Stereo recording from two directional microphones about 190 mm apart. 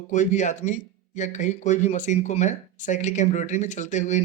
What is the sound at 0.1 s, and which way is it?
Speech, 40° left (ahead or behind).